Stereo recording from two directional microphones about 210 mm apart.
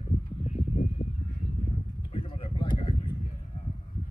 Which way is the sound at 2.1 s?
25° left (ahead or behind).